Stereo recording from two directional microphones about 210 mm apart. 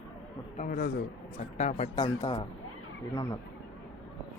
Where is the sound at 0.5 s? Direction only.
40° left (ahead or behind).